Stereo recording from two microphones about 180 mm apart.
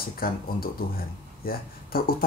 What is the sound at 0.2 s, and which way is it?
Speech, 55° left (ahead or behind).